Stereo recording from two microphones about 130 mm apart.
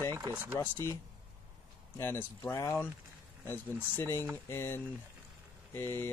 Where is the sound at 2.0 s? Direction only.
20° left (ahead or behind).